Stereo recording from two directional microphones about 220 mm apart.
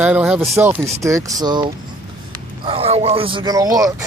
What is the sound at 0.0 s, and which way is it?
A man's voice, 5° right (ahead or behind).